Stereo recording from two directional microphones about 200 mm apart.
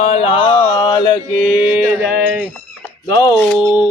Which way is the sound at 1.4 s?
5° right (ahead or behind).